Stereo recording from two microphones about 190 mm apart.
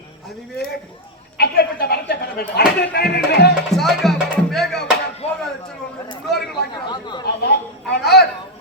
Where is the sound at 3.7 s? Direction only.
Centre (ahead or behind).